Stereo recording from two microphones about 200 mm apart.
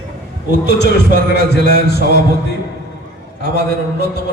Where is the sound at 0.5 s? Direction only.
60° left (ahead or behind).